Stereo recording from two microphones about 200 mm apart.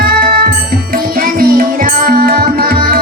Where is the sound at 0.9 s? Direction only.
50° right (ahead or behind).